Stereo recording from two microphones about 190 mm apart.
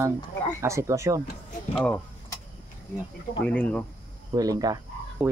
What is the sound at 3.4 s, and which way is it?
Speech, 5° left (ahead or behind).